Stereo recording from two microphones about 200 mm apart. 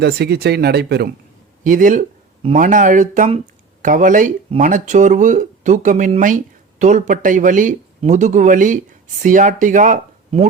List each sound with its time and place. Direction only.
0.0 s speech: 55° right (ahead or behind)
1.6 s speech: 40° right (ahead or behind)